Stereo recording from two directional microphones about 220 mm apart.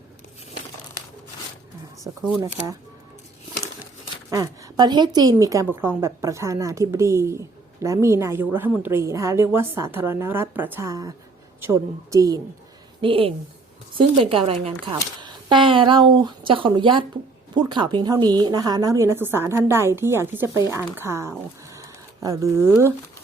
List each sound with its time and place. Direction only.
4.3 s a woman's voice: 15° right (ahead or behind)